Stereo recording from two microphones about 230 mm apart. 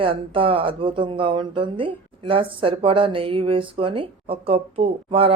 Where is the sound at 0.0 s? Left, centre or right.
Right.